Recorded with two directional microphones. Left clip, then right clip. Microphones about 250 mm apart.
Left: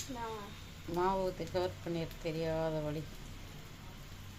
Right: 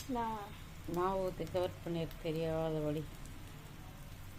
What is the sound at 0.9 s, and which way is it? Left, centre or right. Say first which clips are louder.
Speech: left 2 dB; centre.